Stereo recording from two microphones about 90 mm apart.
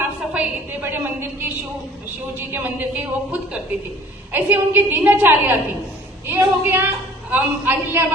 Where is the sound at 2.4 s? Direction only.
25° right (ahead or behind).